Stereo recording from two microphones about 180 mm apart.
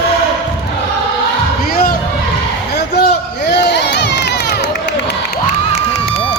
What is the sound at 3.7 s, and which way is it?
Crowd, 75° left (ahead or behind).